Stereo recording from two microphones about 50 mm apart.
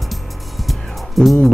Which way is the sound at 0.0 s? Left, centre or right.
Centre.